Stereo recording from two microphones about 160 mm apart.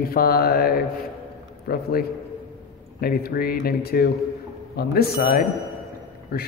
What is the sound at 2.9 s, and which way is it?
A man's voice, 70° left (ahead or behind).